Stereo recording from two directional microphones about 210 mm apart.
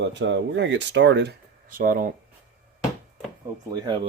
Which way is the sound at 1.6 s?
40° right (ahead or behind).